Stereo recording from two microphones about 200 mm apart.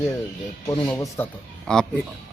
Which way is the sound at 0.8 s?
10° left (ahead or behind).